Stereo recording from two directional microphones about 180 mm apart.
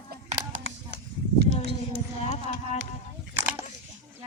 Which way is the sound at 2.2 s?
35° left (ahead or behind).